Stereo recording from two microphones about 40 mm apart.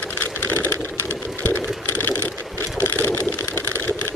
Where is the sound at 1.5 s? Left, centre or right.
Left.